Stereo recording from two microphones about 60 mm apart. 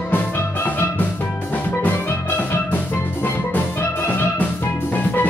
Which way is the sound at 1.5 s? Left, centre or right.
Left.